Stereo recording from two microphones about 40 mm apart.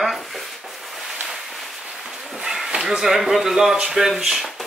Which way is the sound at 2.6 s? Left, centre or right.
Centre.